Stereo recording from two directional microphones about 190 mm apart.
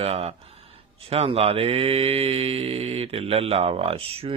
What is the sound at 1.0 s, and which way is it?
Speech, 30° right (ahead or behind).